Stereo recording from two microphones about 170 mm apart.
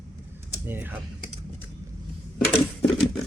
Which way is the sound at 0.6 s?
10° right (ahead or behind).